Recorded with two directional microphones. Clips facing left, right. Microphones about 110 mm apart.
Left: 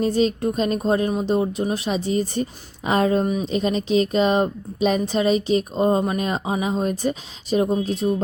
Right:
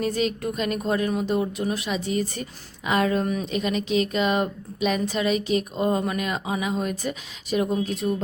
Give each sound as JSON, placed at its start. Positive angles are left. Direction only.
{"t": 0.0, "sound": "a woman's voice", "side_deg": 30}
{"t": 3.2, "sound": "speech", "side_deg": 20}
{"t": 3.5, "sound": "a woman's voice", "side_deg": 35}